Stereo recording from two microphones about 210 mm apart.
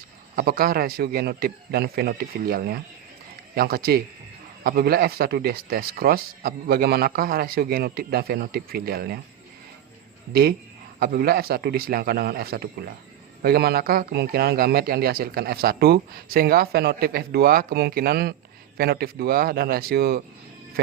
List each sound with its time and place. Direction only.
0.3 s speech: 45° right (ahead or behind)
11.0 s speech: 45° right (ahead or behind)